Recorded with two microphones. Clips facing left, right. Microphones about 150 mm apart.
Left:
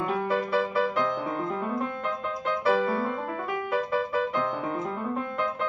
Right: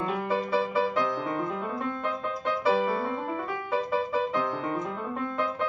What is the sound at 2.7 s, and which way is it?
Music, 20° right (ahead or behind).